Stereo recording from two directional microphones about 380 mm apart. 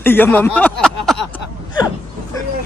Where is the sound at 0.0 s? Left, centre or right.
Centre.